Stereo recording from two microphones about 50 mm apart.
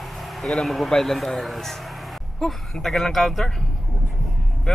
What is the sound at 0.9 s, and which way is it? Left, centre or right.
Speech, centre.